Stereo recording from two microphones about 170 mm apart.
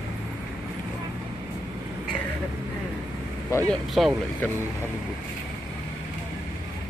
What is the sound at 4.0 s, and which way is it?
Speech, centre (ahead or behind).